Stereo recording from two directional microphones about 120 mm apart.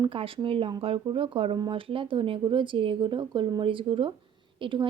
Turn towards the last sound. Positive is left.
turn(degrees=-45)  # may be behind; listen again after turning